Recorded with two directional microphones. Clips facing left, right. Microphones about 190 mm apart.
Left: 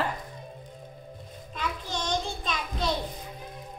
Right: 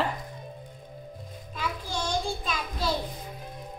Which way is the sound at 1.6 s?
10° right (ahead or behind).